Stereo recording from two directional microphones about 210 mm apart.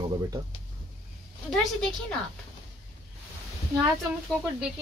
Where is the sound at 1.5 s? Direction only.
5° left (ahead or behind).